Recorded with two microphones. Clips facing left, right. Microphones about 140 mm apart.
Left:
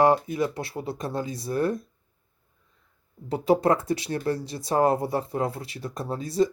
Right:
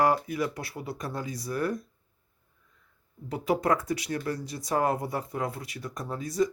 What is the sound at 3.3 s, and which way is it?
Speech, 30° left (ahead or behind).